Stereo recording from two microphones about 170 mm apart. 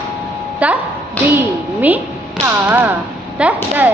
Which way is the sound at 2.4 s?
10° right (ahead or behind).